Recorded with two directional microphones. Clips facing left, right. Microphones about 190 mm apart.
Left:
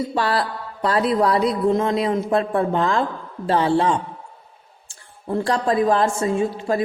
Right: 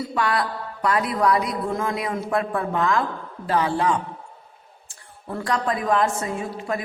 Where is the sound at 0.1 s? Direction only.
30° left (ahead or behind).